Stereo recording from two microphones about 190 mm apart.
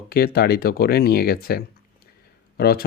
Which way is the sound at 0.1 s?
55° left (ahead or behind).